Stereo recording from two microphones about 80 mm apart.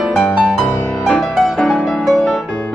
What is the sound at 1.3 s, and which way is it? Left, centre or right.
Music, centre.